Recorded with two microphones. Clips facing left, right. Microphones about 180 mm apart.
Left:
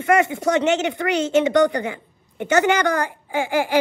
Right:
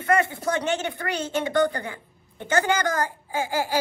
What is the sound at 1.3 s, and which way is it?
A woman's voice, 20° left (ahead or behind).